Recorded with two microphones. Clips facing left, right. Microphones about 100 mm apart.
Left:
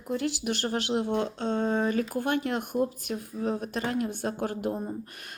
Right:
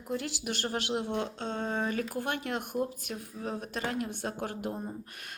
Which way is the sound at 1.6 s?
5° left (ahead or behind).